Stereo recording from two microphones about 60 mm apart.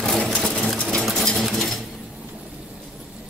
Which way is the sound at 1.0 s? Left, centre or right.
Centre.